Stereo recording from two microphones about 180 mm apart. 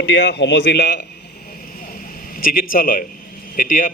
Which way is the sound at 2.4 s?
50° left (ahead or behind).